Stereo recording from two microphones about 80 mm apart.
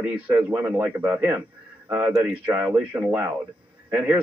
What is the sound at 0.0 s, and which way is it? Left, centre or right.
A man's voice, centre.